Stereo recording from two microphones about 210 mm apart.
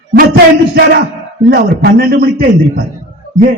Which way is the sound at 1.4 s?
45° right (ahead or behind).